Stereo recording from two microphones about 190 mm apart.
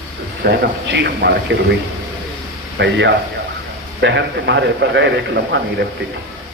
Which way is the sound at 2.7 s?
65° right (ahead or behind).